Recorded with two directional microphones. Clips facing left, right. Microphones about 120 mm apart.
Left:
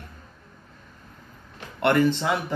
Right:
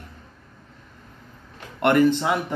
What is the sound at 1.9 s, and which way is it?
Speech, 10° right (ahead or behind).